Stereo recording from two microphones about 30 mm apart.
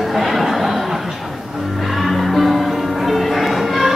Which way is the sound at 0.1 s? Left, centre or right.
Centre.